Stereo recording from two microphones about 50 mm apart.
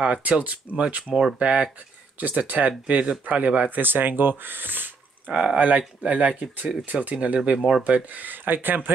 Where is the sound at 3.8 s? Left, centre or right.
Right.